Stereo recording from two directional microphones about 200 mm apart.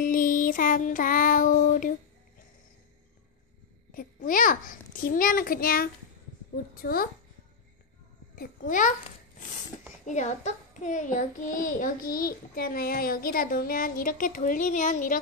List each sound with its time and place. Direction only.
0.0 s music: 45° left (ahead or behind)
3.9 s a child's voice: 45° left (ahead or behind)
8.4 s a child's voice: 40° left (ahead or behind)
10.0 s a child's voice: 35° left (ahead or behind)